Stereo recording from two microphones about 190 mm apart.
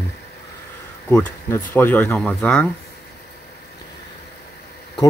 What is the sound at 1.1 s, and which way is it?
Speech, 10° left (ahead or behind).